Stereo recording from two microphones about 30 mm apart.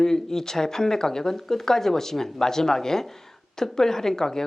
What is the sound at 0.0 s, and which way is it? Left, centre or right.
Speech, centre.